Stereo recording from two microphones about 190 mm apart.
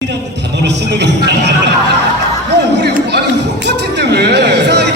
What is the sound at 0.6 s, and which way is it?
Speech, 65° right (ahead or behind).